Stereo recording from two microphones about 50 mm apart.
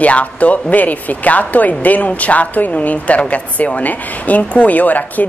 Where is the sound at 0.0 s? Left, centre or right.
Left.